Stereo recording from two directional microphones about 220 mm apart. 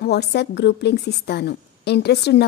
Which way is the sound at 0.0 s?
50° left (ahead or behind).